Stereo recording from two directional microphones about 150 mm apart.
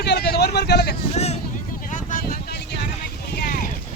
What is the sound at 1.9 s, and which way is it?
Vehicle, 65° left (ahead or behind).